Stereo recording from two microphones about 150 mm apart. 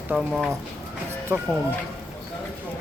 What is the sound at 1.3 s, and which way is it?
Speech, 20° right (ahead or behind).